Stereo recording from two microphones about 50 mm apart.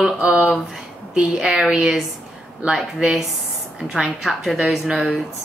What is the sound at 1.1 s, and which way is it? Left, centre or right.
Speech, centre.